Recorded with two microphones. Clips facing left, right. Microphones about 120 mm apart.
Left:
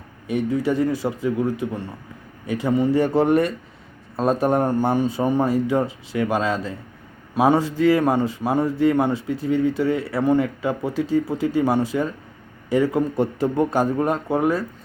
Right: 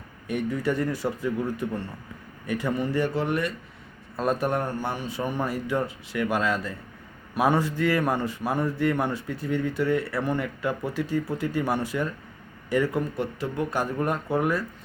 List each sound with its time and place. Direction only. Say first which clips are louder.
0.5 s speech: left 7 dB; 20° left (ahead or behind)
3.0 s a man's voice: left 8 dB; 40° left (ahead or behind)
4.2 s a man's voice: left 6 dB; 30° left (ahead or behind)
13.1 s a man's voice: left 8 dB; 40° left (ahead or behind)
13.9 s speech: left 5 dB; 25° left (ahead or behind)